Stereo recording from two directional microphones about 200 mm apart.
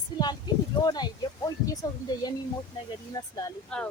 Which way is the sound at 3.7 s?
5° left (ahead or behind).